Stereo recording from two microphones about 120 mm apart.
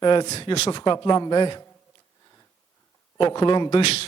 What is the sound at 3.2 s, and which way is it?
Speech, 45° left (ahead or behind).